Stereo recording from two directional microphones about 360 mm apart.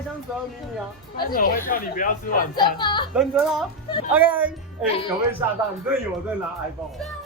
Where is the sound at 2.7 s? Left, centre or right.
Centre.